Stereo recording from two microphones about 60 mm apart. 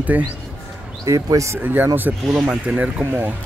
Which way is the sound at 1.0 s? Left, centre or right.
Right.